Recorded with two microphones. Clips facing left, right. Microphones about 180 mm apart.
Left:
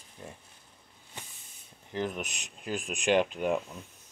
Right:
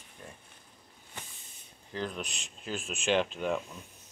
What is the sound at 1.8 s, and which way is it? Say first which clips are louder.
Speech: left 3 dB; 20° left (ahead or behind).